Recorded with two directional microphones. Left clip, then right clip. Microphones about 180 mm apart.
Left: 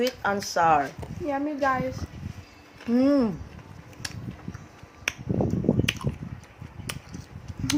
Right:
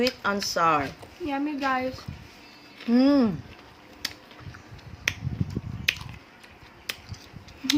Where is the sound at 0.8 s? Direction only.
40° right (ahead or behind).